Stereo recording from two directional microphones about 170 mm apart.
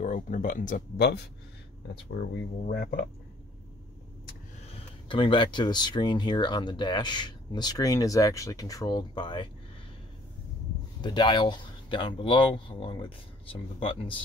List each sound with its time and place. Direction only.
0.0 s speech: 50° left (ahead or behind)
4.6 s speech: 30° left (ahead or behind)
11.0 s speech: 25° left (ahead or behind)